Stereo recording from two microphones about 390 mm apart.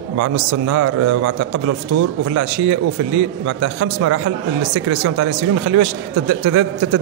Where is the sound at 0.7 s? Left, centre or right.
Right.